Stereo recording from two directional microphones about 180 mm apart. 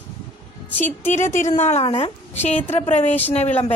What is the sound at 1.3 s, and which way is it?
A woman's voice, 40° left (ahead or behind).